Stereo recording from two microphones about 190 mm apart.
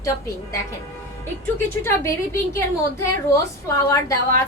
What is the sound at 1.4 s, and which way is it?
A woman's voice, 15° left (ahead or behind).